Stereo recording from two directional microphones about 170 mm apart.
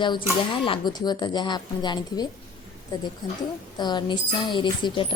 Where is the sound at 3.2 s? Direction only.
25° left (ahead or behind).